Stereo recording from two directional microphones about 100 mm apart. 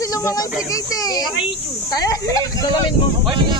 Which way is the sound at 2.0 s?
40° left (ahead or behind).